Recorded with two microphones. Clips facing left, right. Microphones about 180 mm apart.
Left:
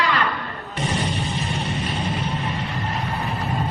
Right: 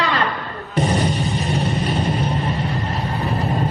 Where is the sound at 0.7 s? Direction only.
40° right (ahead or behind).